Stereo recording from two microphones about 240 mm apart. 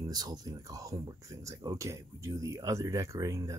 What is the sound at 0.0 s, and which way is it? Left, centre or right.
Speech, centre.